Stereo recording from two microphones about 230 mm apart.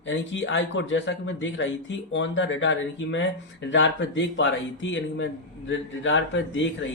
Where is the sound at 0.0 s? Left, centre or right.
Left.